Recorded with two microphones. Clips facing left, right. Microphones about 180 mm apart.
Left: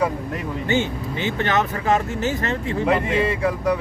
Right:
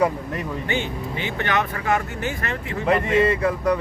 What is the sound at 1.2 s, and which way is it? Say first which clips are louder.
Speech: left 3 dB; 30° left (ahead or behind).